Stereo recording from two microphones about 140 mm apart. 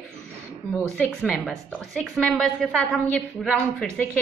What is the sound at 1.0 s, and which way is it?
A woman's voice, 5° left (ahead or behind).